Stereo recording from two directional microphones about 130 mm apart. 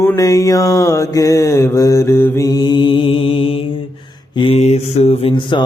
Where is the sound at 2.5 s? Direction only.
30° left (ahead or behind).